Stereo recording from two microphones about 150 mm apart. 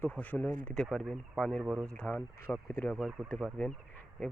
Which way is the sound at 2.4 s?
15° left (ahead or behind).